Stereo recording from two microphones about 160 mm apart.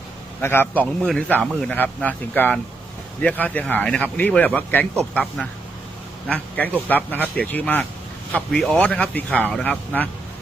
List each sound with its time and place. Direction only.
0.4 s a man's voice: 15° left (ahead or behind)